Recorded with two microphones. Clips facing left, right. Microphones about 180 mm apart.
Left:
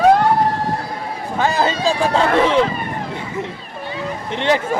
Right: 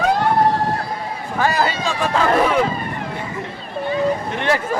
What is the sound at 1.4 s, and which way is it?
Speech, 20° left (ahead or behind).